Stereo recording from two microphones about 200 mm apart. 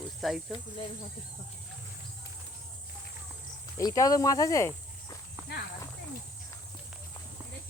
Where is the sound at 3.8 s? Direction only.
15° left (ahead or behind).